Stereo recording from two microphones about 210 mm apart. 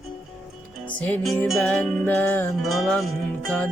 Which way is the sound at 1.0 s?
5° left (ahead or behind).